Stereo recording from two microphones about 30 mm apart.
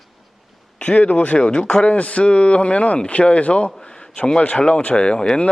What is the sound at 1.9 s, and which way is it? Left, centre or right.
A man's voice, left.